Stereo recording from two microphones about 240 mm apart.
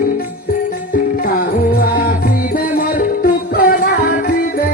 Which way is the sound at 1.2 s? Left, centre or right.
Left.